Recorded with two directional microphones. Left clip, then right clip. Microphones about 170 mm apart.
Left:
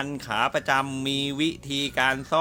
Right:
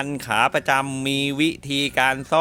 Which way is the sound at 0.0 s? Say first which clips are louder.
Right 5 dB; 40° right (ahead or behind).